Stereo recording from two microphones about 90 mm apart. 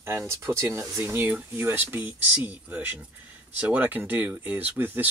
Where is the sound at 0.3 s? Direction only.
30° right (ahead or behind).